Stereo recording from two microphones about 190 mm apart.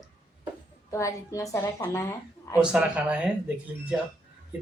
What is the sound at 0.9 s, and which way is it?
A woman's voice, 15° left (ahead or behind).